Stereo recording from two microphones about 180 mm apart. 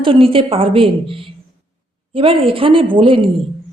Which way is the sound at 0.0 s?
30° right (ahead or behind).